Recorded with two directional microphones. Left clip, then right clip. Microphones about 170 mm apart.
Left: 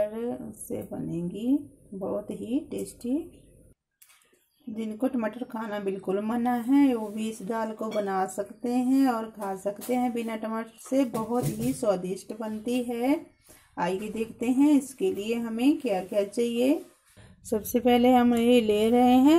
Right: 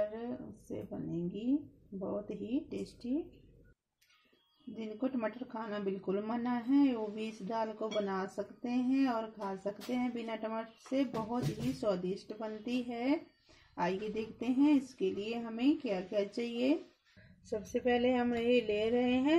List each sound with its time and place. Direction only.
0.0 s a sound: 20° left (ahead or behind)
1.1 s speech: 20° left (ahead or behind)
4.7 s speech: 20° left (ahead or behind)
11.8 s speech: 20° left (ahead or behind)
17.5 s speech: 40° left (ahead or behind)